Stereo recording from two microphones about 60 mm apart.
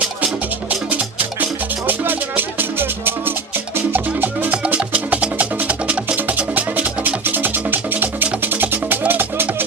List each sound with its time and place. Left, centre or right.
0.9 s music: right